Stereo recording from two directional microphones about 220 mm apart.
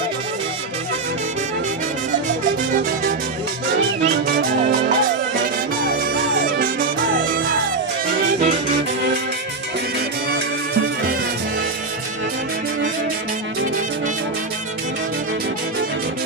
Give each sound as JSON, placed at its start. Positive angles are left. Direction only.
{"t": 4.0, "sound": "music", "side_deg": -45}